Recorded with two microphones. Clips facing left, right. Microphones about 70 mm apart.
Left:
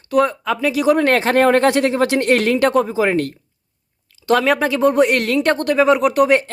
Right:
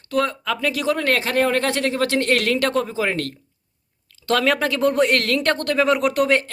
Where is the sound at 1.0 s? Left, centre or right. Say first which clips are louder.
Left 6 dB; left.